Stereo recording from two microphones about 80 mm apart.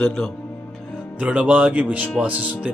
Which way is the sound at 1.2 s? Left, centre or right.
Centre.